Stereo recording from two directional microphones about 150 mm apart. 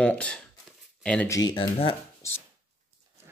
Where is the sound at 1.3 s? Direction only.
25° left (ahead or behind).